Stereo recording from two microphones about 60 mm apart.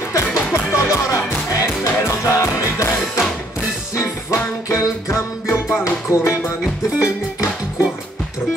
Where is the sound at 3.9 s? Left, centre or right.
Left.